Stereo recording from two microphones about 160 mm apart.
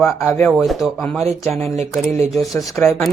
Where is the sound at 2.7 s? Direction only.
15° left (ahead or behind).